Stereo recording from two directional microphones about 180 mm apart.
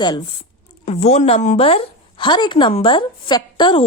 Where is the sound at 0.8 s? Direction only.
35° left (ahead or behind).